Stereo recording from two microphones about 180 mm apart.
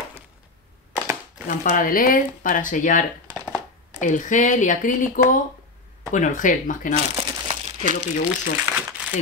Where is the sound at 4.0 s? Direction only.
45° left (ahead or behind).